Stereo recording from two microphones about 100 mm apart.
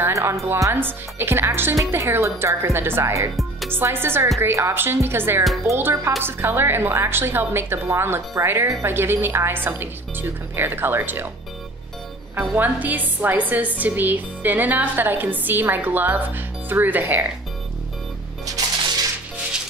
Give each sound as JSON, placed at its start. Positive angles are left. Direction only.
{"t": 0.0, "sound": "speech", "side_deg": -30}
{"t": 12.4, "sound": "speech", "side_deg": -20}
{"t": 18.6, "sound": "music", "side_deg": -35}